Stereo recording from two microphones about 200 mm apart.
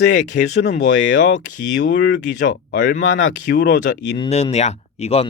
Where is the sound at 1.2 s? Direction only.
40° left (ahead or behind).